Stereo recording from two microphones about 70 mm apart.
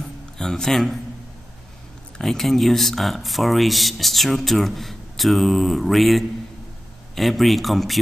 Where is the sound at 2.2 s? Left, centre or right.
Centre.